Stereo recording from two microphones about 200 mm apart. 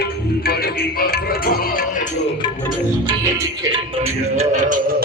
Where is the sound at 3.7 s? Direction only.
30° right (ahead or behind).